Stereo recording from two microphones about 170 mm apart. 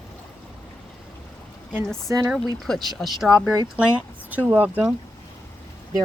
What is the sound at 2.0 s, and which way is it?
Speech, 20° right (ahead or behind).